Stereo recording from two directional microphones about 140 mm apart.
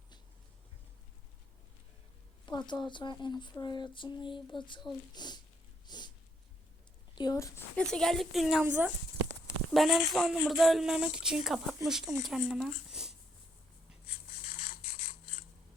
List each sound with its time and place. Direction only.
2.5 s a sound: 30° left (ahead or behind)
7.2 s speech: 25° left (ahead or behind)
7.9 s speech: 5° left (ahead or behind)
9.7 s speech: centre (ahead or behind)